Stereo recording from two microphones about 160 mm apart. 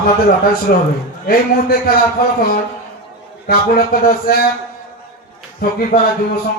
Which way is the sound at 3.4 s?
65° left (ahead or behind).